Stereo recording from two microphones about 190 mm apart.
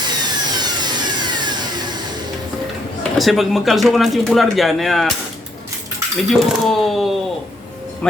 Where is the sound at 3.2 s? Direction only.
Centre (ahead or behind).